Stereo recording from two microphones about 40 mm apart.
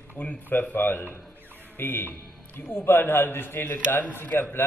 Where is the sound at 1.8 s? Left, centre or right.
Left.